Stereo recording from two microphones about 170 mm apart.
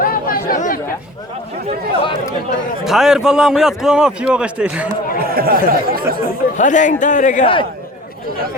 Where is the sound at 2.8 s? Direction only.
5° right (ahead or behind).